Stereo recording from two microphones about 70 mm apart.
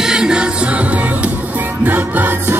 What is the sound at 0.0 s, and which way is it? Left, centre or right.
Music, centre.